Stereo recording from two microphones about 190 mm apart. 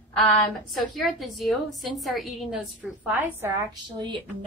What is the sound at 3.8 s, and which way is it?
Speech, 25° right (ahead or behind).